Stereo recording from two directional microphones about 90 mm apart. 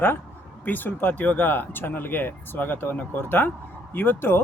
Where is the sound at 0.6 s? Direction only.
20° left (ahead or behind).